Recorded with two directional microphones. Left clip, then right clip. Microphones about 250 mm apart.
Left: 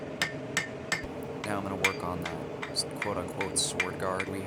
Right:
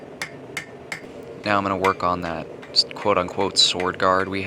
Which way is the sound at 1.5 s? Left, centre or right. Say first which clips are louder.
Right 11 dB; left.